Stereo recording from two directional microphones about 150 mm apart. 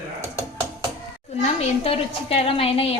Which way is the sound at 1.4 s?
40° left (ahead or behind).